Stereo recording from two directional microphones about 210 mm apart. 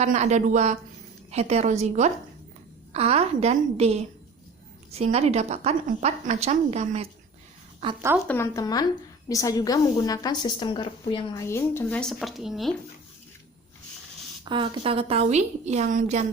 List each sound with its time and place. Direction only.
0.0 s a woman's voice: 35° right (ahead or behind)
8.3 s a woman's voice: 15° left (ahead or behind)
11.4 s speech: 10° left (ahead or behind)
14.4 s a woman's voice: 25° right (ahead or behind)